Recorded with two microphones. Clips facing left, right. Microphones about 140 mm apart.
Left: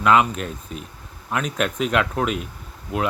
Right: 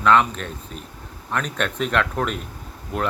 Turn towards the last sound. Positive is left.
turn(degrees=5)  # may be behind; listen again after turning